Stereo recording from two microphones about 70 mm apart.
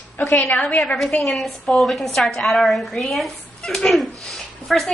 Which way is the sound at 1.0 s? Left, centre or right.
Centre.